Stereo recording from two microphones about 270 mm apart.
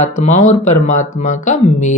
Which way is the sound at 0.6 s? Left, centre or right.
Left.